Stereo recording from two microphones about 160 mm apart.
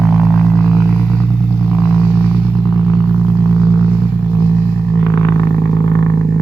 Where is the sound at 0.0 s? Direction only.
Centre (ahead or behind).